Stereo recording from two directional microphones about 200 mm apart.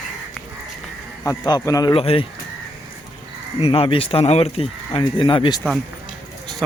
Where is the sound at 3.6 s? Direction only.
30° left (ahead or behind).